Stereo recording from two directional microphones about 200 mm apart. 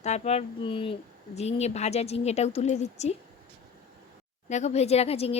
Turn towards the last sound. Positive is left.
turn(degrees=30)  # may be behind; listen again after turning